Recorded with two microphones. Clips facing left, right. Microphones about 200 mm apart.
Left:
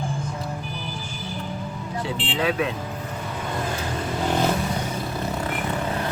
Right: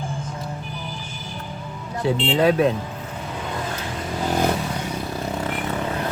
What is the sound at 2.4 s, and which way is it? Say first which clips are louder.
Speech: right 5 dB; 40° right (ahead or behind).